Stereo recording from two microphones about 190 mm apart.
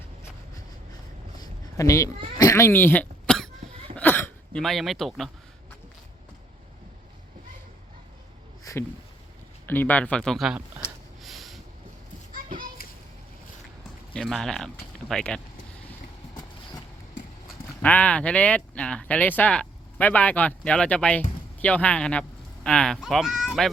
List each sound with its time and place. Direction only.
1.4 s a sound: 15° left (ahead or behind)
2.4 s throat clearing: 15° left (ahead or behind)
3.9 s a sound: 10° left (ahead or behind)
8.7 s a sound: 15° left (ahead or behind)
9.6 s speech: 10° left (ahead or behind)
11.2 s vehicle: centre (ahead or behind)
12.3 s children playing: 45° right (ahead or behind)
14.1 s speech: centre (ahead or behind)
17.8 s speech: 5° left (ahead or behind)